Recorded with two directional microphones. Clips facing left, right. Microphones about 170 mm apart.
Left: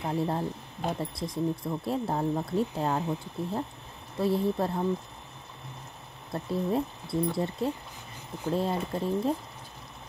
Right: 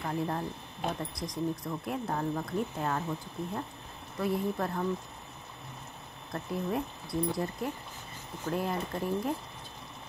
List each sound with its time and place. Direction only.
0.0 s speech: 25° left (ahead or behind)
6.3 s speech: 25° left (ahead or behind)